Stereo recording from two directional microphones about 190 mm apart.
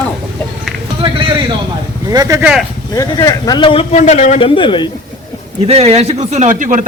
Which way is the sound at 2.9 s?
15° left (ahead or behind).